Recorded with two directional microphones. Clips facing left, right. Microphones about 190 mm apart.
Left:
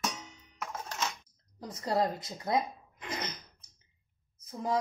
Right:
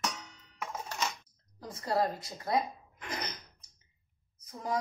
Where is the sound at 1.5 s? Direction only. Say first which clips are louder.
Left 1 dB; 20° left (ahead or behind).